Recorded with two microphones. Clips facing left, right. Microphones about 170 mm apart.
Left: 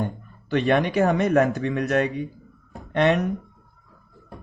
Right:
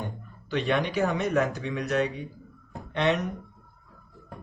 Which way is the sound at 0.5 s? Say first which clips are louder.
Left 6 dB; 55° left (ahead or behind).